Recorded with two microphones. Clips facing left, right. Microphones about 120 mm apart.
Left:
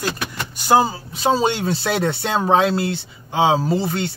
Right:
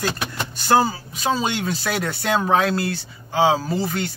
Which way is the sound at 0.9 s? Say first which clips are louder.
Left 4 dB; 25° left (ahead or behind).